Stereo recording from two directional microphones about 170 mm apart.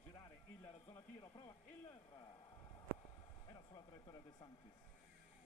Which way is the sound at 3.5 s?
25° left (ahead or behind).